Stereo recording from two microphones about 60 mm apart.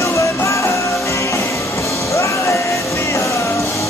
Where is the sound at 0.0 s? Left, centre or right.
Left.